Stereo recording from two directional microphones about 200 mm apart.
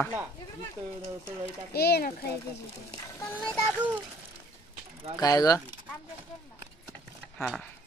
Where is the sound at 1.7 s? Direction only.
50° left (ahead or behind).